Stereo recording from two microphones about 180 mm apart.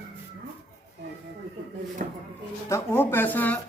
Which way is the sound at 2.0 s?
45° right (ahead or behind).